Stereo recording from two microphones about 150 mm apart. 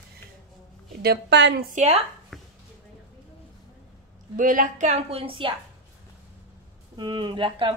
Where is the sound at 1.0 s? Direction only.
90° right.